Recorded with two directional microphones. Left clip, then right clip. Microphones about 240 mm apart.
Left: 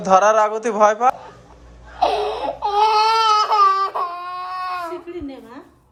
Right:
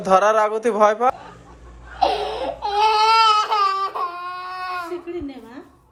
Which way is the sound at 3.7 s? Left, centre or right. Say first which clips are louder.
Left 3 dB; centre.